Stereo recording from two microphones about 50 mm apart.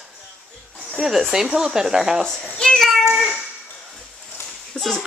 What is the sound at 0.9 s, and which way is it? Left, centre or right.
Speech, centre.